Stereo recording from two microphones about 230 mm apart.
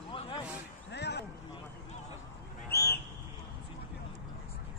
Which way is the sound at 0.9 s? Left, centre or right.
Left.